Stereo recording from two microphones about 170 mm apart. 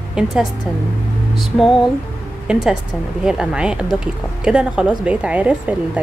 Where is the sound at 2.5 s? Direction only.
5° right (ahead or behind).